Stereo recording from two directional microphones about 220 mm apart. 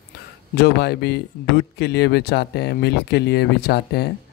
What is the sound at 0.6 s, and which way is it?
Speech, 45° left (ahead or behind).